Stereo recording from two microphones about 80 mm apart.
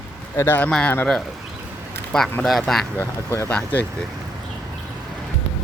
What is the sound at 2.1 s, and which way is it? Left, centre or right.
Speech, centre.